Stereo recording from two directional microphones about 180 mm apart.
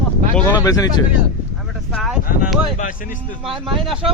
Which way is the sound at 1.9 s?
Centre (ahead or behind).